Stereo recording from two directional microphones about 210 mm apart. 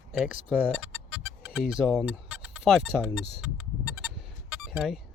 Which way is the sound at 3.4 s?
5° right (ahead or behind).